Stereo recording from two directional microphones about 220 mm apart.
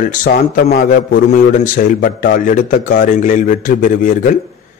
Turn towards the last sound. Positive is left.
turn(degrees=40)  # may be behind; listen again after turning